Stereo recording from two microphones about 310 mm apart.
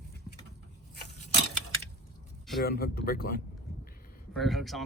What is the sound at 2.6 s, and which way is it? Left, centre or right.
Speech, left.